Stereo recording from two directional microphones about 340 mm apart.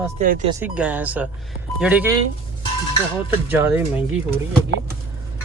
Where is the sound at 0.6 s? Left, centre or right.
Centre.